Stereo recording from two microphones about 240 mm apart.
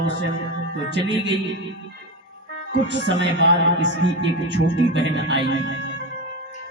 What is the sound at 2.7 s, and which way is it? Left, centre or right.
Speech, right.